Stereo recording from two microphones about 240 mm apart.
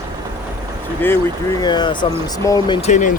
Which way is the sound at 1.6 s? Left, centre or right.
Centre.